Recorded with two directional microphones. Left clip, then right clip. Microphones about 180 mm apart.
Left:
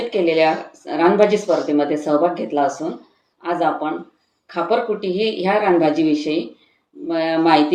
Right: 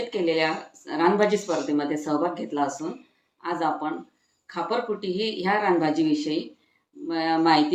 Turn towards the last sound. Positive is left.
turn(degrees=-25)  # may be behind; listen again after turning